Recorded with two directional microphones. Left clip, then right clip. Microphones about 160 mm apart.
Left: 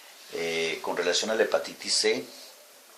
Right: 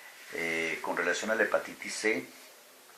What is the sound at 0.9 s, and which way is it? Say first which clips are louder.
Speech: left 4 dB; 35° left (ahead or behind).